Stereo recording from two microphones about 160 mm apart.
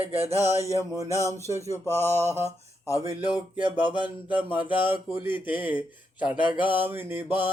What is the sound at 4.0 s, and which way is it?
Mantra, 10° right (ahead or behind).